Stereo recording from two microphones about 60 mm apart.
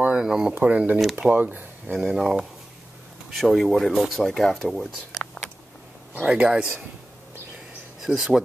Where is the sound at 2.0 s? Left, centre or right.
Centre.